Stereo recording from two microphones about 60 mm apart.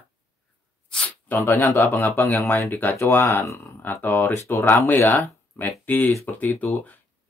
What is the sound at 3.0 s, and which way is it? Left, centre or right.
Speech, left.